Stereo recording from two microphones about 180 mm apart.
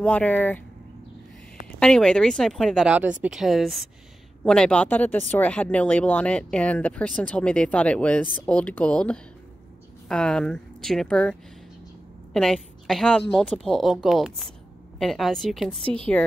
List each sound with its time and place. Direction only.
0.0 s speech: 10° left (ahead or behind)
1.8 s speech: 5° left (ahead or behind)
12.4 s a woman's voice: centre (ahead or behind)
15.8 s a woman's voice: 30° right (ahead or behind)